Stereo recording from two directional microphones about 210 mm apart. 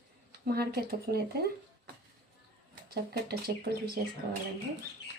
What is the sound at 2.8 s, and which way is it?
Speech, 50° right (ahead or behind).